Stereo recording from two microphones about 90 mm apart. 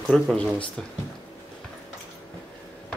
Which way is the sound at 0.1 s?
10° left (ahead or behind).